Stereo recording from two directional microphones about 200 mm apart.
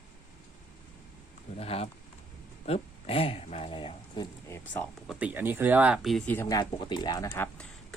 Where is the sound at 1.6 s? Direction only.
30° left (ahead or behind).